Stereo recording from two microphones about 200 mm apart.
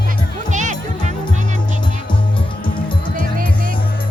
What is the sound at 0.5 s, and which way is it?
Music, 40° right (ahead or behind).